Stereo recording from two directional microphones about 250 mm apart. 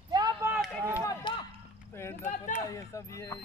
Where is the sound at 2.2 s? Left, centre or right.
Left.